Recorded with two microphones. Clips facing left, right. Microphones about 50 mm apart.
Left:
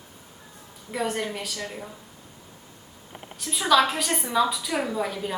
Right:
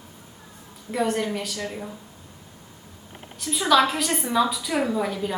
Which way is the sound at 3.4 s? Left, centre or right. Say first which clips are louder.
Right 1 dB; centre.